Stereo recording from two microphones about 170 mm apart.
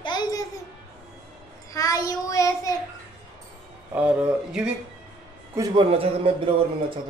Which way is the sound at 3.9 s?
5° right (ahead or behind).